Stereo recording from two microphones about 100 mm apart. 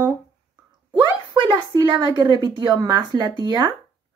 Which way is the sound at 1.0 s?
45° right (ahead or behind).